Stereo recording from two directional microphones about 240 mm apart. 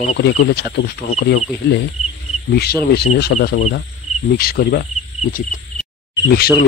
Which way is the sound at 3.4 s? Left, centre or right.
Left.